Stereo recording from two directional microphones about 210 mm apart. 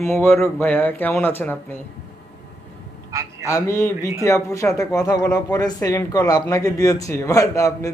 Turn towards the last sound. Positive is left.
turn(degrees=15)  # may be behind; listen again after turning